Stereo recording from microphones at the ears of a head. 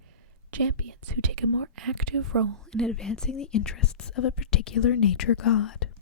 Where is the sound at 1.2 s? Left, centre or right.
Right.